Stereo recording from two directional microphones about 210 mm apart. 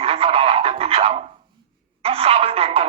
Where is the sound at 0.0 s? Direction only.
25° right (ahead or behind).